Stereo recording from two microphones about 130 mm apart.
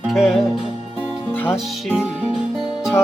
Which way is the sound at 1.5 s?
5° right (ahead or behind).